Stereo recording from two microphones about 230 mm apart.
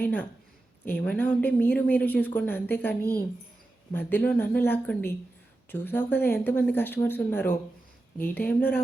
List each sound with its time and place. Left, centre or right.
0.0 s speech: centre